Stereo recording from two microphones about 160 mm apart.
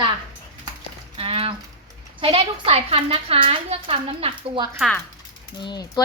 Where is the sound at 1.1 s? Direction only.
35° right (ahead or behind).